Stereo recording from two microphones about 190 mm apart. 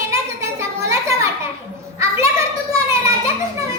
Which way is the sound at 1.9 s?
15° right (ahead or behind).